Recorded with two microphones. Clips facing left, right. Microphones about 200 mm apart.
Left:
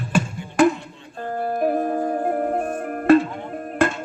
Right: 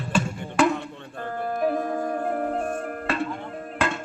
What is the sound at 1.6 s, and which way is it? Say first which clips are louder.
Music: left 3 dB; 40° left (ahead or behind).